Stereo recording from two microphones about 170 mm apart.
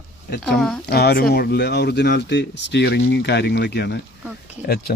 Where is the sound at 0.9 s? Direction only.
65° left (ahead or behind); by 3.9 s 85° left.